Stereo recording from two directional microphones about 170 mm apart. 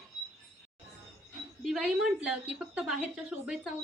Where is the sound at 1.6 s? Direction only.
5° right (ahead or behind).